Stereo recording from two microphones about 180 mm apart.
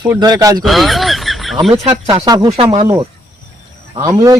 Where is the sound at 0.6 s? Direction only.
Centre (ahead or behind).